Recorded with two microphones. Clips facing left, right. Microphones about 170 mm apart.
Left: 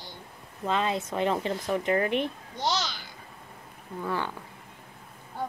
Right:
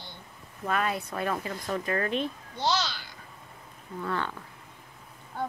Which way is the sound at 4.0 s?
10° left (ahead or behind).